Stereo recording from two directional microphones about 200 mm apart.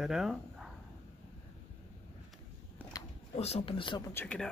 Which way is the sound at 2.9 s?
20° left (ahead or behind).